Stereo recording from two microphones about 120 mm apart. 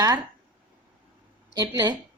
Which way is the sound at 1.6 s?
35° right (ahead or behind).